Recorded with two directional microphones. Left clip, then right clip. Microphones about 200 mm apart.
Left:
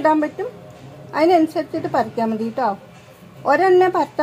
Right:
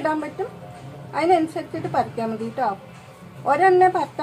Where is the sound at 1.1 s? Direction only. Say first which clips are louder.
Left 4 dB; 45° left (ahead or behind).